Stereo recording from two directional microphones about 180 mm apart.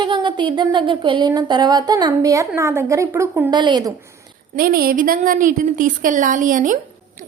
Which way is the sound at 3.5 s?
25° right (ahead or behind).